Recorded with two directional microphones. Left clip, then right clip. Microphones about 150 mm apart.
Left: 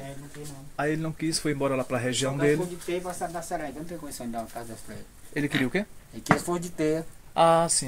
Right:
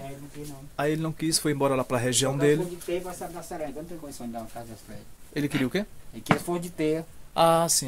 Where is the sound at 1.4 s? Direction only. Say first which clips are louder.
Right 2 dB; 45° right (ahead or behind).